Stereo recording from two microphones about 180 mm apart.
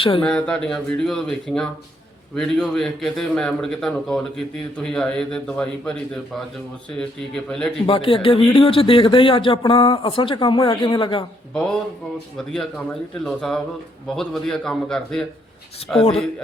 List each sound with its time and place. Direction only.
0.2 s a man's voice: 5° left (ahead or behind)
7.9 s speech: 30° left (ahead or behind)
11.5 s a man's voice: 5° left (ahead or behind)